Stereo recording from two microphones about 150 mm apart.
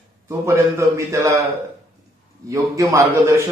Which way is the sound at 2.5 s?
20° right (ahead or behind).